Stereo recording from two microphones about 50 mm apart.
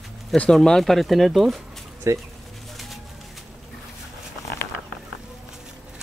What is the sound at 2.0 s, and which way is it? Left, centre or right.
Speech, right.